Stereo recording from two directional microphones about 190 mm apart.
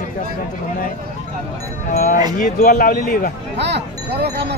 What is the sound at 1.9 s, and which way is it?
Speech, 50° left (ahead or behind).